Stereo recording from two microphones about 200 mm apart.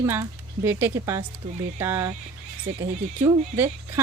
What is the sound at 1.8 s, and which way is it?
Speech, 10° right (ahead or behind).